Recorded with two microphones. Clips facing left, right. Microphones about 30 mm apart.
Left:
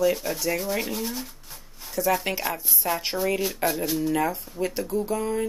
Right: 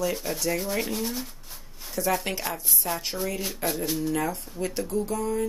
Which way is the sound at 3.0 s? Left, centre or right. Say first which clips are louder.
Left 5 dB; left.